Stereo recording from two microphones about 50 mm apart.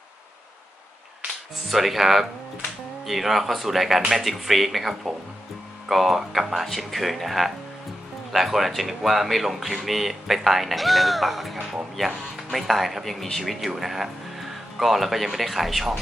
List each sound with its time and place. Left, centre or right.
1.7 s speech: centre